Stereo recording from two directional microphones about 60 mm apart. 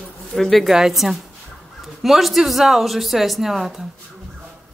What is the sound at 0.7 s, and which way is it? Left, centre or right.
A woman's voice, centre.